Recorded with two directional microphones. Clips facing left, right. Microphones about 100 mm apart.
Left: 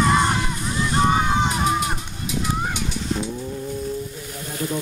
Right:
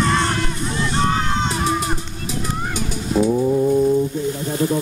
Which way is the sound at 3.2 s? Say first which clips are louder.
Right 12 dB; 50° right (ahead or behind).